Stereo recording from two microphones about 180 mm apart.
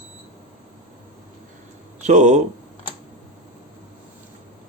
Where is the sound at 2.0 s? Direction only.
40° right (ahead or behind).